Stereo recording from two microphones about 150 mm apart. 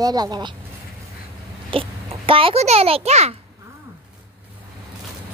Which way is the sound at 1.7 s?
35° right (ahead or behind).